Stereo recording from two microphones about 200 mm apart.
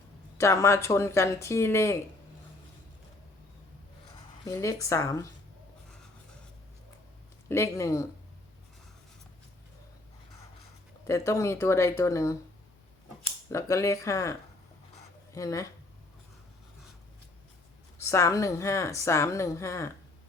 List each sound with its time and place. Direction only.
0.3 s speech: 15° left (ahead or behind)
4.4 s speech: 15° left (ahead or behind)
7.4 s speech: 15° left (ahead or behind)
11.0 s speech: 15° left (ahead or behind)
13.5 s speech: 15° left (ahead or behind)
17.9 s speech: 15° left (ahead or behind)